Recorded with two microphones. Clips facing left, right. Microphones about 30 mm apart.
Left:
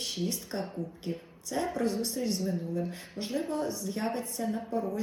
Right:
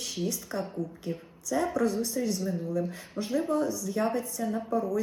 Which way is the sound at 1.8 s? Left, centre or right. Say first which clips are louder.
Right 2 dB; left.